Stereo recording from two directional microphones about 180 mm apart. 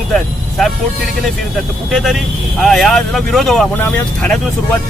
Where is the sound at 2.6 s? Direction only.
Centre (ahead or behind).